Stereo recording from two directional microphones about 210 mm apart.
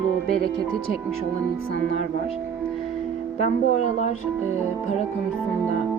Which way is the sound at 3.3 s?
30° left (ahead or behind).